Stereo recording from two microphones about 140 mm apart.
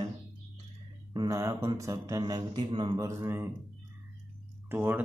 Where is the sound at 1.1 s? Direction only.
25° right (ahead or behind).